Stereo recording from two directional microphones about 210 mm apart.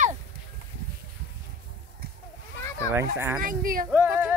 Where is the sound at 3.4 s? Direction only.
40° right (ahead or behind).